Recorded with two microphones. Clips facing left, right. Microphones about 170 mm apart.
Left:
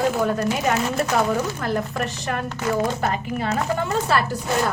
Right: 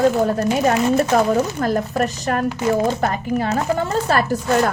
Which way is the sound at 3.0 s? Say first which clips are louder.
Right 4 dB; 45° right (ahead or behind).